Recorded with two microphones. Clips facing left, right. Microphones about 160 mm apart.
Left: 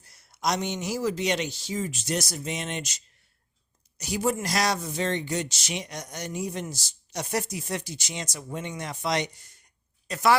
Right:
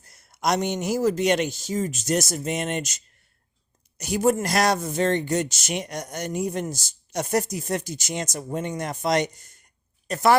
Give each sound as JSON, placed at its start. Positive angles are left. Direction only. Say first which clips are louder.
{"t": 0.0, "sound": "speech", "louder": "right 3 dB", "side_deg": -50}